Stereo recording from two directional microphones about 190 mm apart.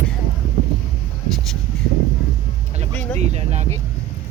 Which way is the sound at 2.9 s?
35° right (ahead or behind).